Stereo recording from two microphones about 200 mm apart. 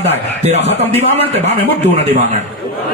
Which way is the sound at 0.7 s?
35° right (ahead or behind).